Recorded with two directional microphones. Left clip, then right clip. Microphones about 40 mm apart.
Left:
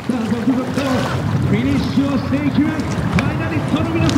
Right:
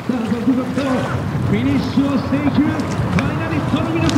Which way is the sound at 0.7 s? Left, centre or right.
Centre.